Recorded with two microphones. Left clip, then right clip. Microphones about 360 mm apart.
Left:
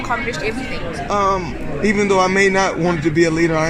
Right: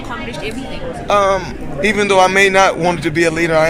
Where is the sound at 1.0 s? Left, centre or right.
Right.